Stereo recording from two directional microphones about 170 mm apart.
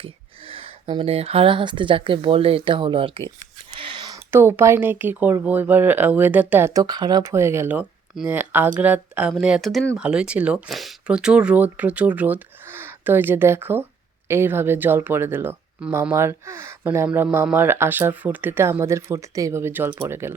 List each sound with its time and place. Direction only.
0.0 s speech: 35° right (ahead or behind); by 20.3 s 15° right (ahead or behind)